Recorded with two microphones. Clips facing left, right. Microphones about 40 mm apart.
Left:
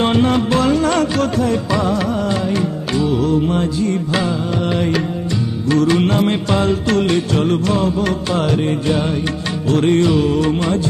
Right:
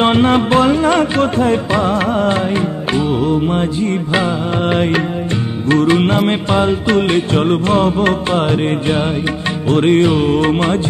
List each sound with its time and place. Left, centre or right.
0.0 s music: right